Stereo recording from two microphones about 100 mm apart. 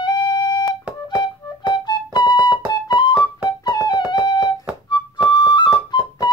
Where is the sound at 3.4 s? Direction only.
45° left (ahead or behind).